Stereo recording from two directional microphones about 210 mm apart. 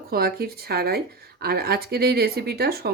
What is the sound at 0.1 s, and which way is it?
Speech, 45° right (ahead or behind).